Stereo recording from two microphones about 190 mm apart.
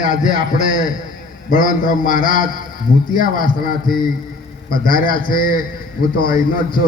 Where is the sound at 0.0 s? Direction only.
40° left (ahead or behind).